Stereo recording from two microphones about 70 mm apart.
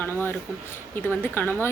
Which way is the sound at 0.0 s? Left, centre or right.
Left.